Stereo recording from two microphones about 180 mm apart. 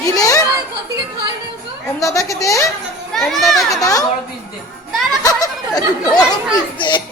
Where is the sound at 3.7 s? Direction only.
20° left (ahead or behind).